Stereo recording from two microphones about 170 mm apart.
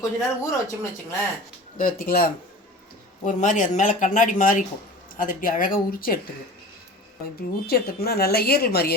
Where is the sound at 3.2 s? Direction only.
45° left (ahead or behind).